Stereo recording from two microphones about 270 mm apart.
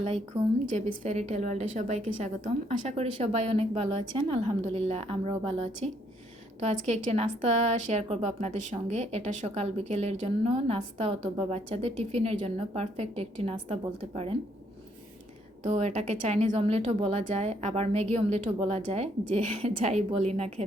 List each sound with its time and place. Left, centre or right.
1.0 s speech: right
15.6 s speech: right